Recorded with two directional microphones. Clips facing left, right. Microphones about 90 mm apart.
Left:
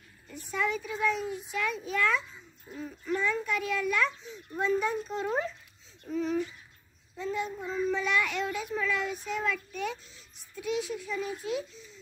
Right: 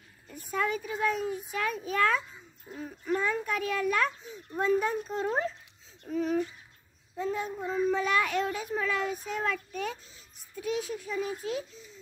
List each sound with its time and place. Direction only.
0.5 s a child's voice: 45° right (ahead or behind)
6.0 s a child's voice: 50° right (ahead or behind)
7.2 s child singing: 45° right (ahead or behind)
7.6 s a child's voice: 10° right (ahead or behind)
7.9 s a child's voice: 45° right (ahead or behind)